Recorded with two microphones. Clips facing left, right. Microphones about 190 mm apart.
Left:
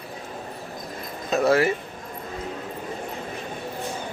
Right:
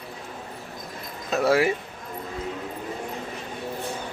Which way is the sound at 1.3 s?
10° right (ahead or behind).